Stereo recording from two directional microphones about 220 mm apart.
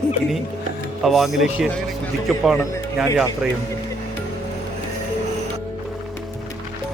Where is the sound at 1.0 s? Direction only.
Centre (ahead or behind).